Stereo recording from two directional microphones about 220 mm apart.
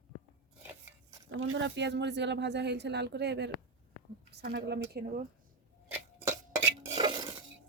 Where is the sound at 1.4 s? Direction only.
60° right (ahead or behind).